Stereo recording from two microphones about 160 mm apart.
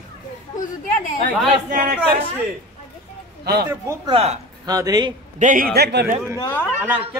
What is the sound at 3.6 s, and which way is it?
Speech, 20° right (ahead or behind).